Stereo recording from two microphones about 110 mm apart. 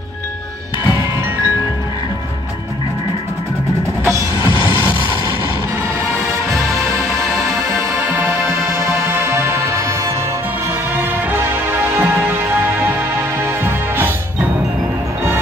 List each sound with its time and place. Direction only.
7.9 s music: 20° right (ahead or behind)
13.6 s music: 20° right (ahead or behind)